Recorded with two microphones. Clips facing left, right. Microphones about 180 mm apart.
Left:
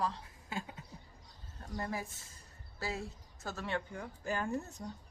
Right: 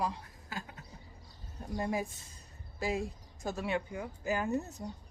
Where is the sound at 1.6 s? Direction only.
15° right (ahead or behind).